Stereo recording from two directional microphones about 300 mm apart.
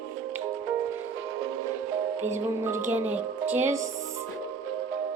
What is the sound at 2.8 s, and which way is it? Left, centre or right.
Speech, centre.